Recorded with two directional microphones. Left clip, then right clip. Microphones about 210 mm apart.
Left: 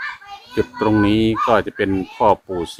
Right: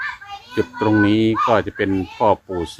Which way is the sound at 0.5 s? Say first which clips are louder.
Even; 20° left (ahead or behind).